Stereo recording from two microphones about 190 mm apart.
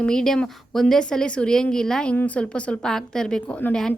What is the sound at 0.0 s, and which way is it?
A woman's voice, 5° left (ahead or behind).